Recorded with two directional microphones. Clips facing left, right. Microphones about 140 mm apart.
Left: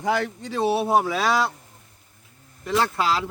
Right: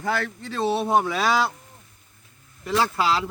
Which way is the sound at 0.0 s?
15° left (ahead or behind).